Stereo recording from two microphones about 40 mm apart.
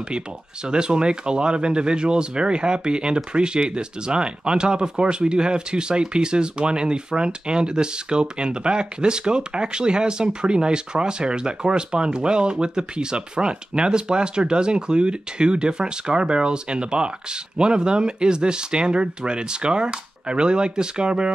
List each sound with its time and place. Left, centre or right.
0.7 s speech: right